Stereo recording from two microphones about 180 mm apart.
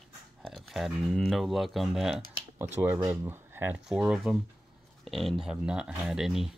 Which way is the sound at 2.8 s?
15° right (ahead or behind).